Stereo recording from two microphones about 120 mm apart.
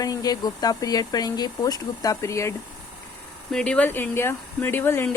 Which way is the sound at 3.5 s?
10° left (ahead or behind).